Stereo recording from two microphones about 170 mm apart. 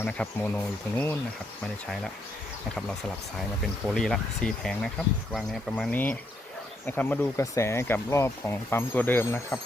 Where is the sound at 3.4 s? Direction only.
Centre (ahead or behind).